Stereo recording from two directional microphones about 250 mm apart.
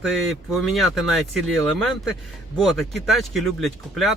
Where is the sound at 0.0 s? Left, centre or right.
Centre.